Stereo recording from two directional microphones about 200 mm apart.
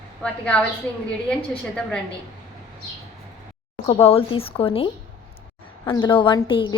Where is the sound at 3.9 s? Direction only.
30° left (ahead or behind).